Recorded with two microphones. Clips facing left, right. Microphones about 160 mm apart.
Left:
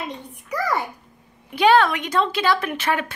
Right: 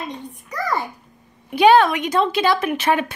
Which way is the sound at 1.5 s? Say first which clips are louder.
Right 3 dB; 15° right (ahead or behind).